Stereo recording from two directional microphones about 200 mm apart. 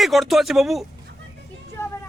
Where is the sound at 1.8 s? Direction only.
15° left (ahead or behind).